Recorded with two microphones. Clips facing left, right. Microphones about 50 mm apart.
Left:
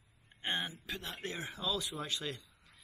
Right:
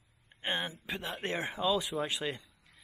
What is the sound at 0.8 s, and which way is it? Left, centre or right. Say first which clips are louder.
Speech: right 4 dB; centre.